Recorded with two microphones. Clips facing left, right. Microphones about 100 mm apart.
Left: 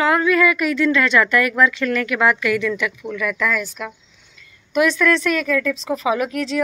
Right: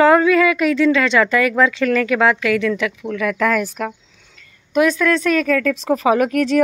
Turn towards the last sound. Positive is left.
turn(degrees=-50)  # may be behind; listen again after turning